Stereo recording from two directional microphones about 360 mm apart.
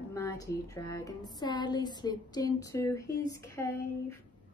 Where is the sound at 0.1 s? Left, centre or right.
Centre.